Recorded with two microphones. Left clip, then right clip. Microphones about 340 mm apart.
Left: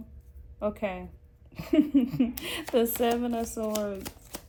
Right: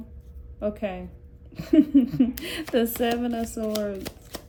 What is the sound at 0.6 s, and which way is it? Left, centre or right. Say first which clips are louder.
Speech: right 2 dB; centre.